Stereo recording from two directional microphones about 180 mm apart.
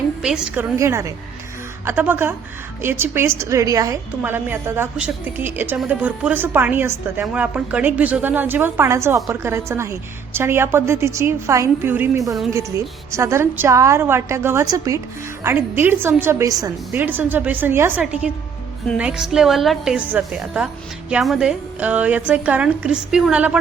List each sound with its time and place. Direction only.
0.2 s a woman's voice: 5° right (ahead or behind)